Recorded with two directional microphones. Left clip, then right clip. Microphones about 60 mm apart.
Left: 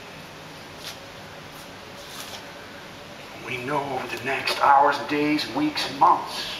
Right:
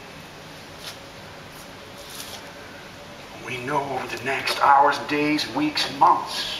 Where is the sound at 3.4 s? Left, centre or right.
Centre.